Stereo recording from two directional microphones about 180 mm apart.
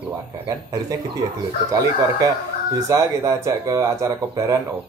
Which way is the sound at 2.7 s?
15° right (ahead or behind).